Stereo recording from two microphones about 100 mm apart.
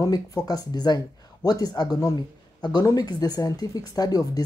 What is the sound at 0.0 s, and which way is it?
Speech, 35° left (ahead or behind).